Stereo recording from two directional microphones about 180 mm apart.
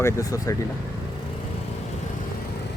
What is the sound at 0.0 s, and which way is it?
Speech, 20° left (ahead or behind).